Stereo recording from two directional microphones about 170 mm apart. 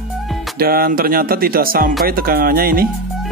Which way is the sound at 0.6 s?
60° right (ahead or behind).